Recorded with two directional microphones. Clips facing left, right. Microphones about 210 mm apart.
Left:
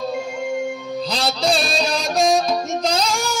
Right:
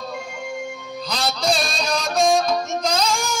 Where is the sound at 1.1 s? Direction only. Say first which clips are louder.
Left 1 dB; 30° left (ahead or behind).